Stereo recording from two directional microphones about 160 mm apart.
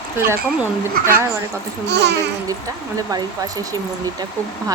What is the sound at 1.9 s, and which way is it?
Speech, 90° right.